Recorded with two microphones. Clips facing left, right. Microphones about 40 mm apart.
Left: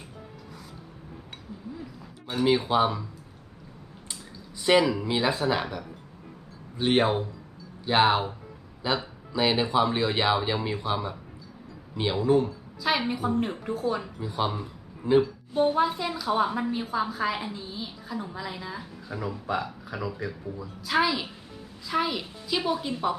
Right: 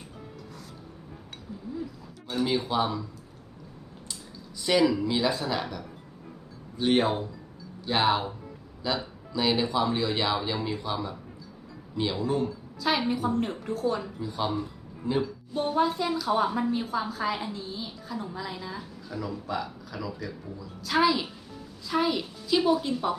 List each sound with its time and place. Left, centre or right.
2.2 s speech: centre
4.6 s a man's voice: left
19.1 s speech: left
20.8 s a woman's voice: centre